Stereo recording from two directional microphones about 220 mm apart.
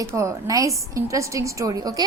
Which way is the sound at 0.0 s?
15° right (ahead or behind).